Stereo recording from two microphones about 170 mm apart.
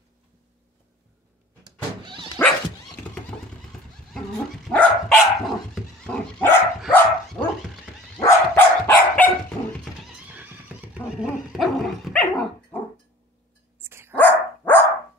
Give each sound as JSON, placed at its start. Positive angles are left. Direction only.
{"t": 1.6, "sound": "power windows", "side_deg": -25}
{"t": 4.6, "sound": "dog", "side_deg": 0}
{"t": 10.2, "sound": "neigh", "side_deg": -10}
{"t": 11.1, "sound": "dog", "side_deg": 0}
{"t": 13.7, "sound": "dog", "side_deg": -15}
{"t": 14.1, "sound": "dog", "side_deg": 10}